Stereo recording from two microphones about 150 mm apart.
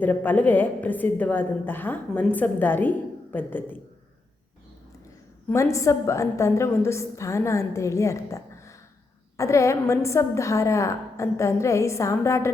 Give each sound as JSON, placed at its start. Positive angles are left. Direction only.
{"t": 0.0, "sound": "a woman's voice", "side_deg": 10}
{"t": 5.5, "sound": "a woman's voice", "side_deg": 20}